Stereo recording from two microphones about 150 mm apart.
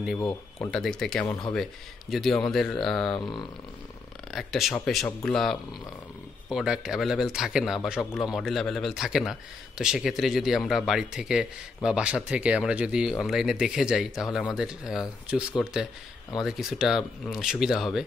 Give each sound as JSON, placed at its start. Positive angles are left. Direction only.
{"t": 0.2, "sound": "speech", "side_deg": 15}
{"t": 0.7, "sound": "speech", "side_deg": 5}
{"t": 3.2, "sound": "speech", "side_deg": 30}
{"t": 4.3, "sound": "speech", "side_deg": 0}